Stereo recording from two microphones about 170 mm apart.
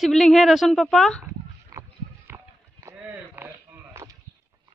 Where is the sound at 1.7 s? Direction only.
20° right (ahead or behind).